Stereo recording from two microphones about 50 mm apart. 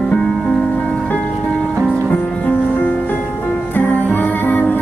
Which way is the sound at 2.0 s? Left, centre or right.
Left.